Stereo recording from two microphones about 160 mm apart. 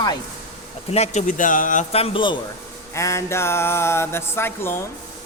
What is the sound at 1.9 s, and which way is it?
Speech, 35° left (ahead or behind).